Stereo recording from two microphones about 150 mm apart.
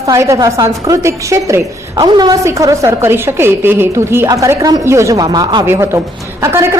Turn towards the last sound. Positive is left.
turn(degrees=-15)  # may be behind; listen again after turning